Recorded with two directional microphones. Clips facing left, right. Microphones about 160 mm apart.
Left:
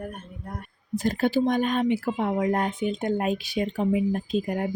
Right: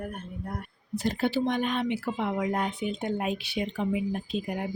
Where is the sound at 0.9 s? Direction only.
45° left (ahead or behind).